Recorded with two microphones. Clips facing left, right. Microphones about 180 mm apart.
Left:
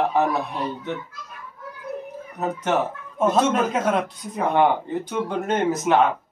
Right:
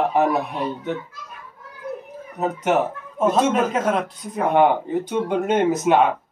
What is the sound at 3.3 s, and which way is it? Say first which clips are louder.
Speech: right 1 dB; centre (ahead or behind).